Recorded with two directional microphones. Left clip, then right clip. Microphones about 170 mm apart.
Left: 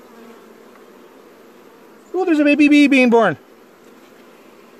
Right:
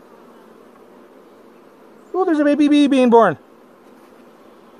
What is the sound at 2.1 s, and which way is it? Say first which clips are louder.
A man's voice: left 1 dB; 30° left (ahead or behind).